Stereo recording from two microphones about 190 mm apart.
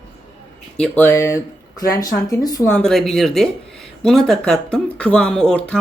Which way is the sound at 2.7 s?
5° left (ahead or behind).